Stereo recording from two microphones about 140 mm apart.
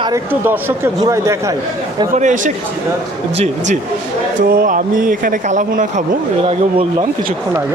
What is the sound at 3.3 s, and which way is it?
Speech, 45° right (ahead or behind).